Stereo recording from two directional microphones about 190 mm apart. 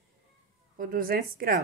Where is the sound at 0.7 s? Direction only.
50° right (ahead or behind).